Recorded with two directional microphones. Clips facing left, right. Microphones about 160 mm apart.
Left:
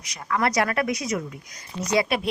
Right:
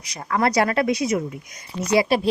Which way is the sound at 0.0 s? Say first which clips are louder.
Right 3 dB; 35° right (ahead or behind).